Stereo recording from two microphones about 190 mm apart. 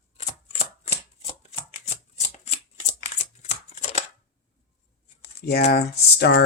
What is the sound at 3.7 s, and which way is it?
Chopping, 35° left (ahead or behind).